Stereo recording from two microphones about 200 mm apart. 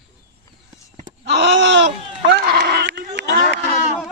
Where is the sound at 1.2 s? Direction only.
60° right (ahead or behind).